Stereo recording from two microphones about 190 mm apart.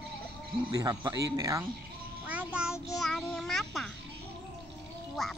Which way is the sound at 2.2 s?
5° right (ahead or behind).